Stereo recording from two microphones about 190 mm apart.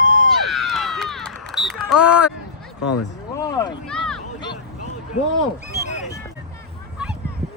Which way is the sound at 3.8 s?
5° left (ahead or behind).